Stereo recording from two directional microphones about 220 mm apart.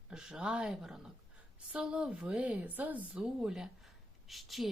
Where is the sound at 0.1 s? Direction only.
5° right (ahead or behind).